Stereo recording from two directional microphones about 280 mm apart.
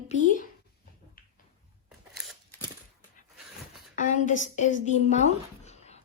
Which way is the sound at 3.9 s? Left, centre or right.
Left.